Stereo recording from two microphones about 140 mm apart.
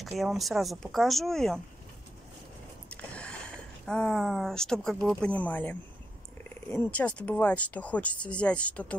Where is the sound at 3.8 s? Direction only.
5° left (ahead or behind).